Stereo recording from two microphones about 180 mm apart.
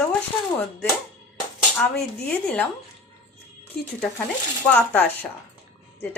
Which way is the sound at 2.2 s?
5° left (ahead or behind).